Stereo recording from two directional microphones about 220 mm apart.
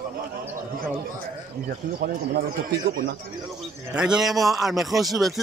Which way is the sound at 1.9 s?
45° right (ahead or behind).